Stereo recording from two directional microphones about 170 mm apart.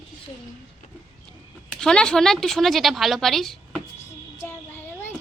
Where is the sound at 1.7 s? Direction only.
5° left (ahead or behind).